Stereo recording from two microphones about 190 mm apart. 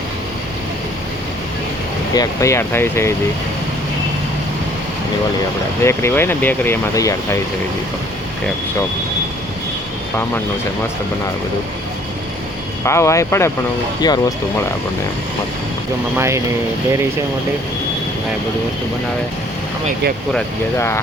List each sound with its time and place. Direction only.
2.1 s speech: 15° left (ahead or behind)
5.8 s speech: 15° left (ahead or behind)
12.8 s speech: 15° left (ahead or behind)
16.1 s speech: 15° right (ahead or behind)
20.7 s speech: 15° left (ahead or behind)